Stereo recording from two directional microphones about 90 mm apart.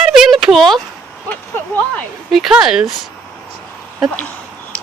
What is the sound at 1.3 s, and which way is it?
Speech, 20° left (ahead or behind).